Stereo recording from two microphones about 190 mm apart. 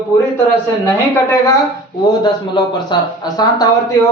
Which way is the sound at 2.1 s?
20° left (ahead or behind).